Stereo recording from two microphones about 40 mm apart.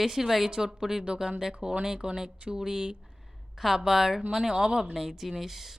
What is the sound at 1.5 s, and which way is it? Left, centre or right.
Speech, right.